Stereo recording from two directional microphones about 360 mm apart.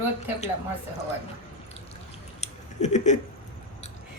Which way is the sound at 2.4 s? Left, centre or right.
Centre.